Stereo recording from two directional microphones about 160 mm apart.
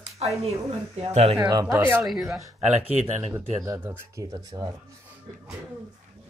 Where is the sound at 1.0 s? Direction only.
40° right (ahead or behind).